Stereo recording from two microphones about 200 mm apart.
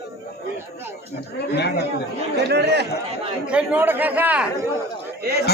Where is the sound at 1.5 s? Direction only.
55° left (ahead or behind).